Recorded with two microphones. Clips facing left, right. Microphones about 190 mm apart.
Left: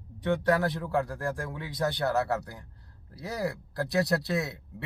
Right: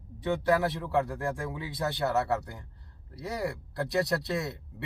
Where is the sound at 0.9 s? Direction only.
Centre (ahead or behind).